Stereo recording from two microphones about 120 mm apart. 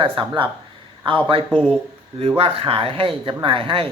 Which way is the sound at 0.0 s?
45° right (ahead or behind).